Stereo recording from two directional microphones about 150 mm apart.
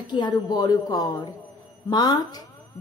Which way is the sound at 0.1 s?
30° left (ahead or behind).